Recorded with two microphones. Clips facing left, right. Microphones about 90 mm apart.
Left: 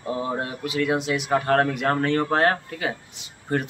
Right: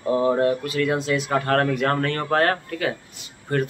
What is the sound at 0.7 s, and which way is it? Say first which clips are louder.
Speech: right 1 dB; 20° left (ahead or behind).